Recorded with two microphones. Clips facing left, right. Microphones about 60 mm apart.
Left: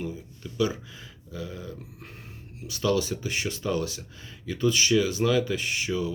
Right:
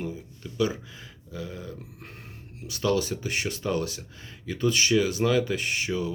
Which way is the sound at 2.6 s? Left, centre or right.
Right.